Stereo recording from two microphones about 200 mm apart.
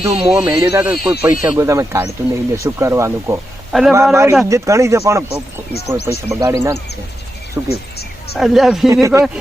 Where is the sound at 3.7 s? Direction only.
Centre (ahead or behind).